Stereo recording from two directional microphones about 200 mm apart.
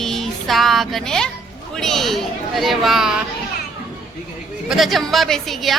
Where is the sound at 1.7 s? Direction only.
Centre (ahead or behind).